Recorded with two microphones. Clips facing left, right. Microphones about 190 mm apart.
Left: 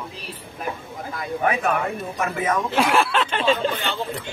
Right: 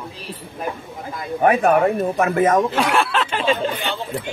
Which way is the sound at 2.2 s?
50° right (ahead or behind).